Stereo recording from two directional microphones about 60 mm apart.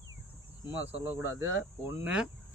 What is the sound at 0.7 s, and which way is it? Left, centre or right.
Speech, right.